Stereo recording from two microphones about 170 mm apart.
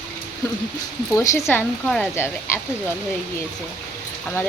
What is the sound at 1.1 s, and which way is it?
Speech, 20° left (ahead or behind).